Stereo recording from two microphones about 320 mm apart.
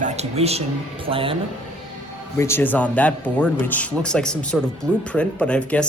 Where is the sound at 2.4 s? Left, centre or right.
Centre.